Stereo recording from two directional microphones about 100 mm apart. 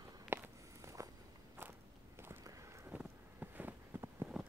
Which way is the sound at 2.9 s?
20° right (ahead or behind).